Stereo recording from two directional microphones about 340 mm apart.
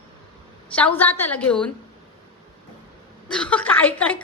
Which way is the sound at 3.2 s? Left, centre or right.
Centre.